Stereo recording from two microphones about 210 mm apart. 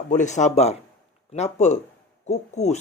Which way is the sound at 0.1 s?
35° left (ahead or behind).